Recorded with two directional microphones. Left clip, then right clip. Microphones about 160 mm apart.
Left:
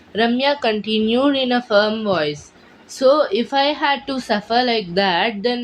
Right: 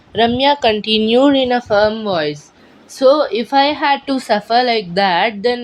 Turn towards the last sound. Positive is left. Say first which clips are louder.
# right 4 dB
turn(degrees=-40)  # may be behind; listen again after turning